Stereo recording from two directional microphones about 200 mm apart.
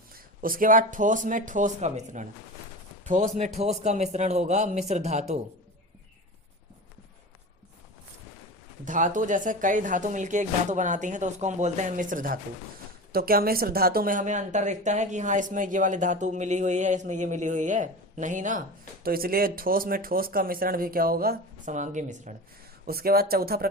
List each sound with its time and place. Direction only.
0.1 s speech: 45° right (ahead or behind)
8.8 s speech: 40° right (ahead or behind)
22.9 s speech: 50° right (ahead or behind)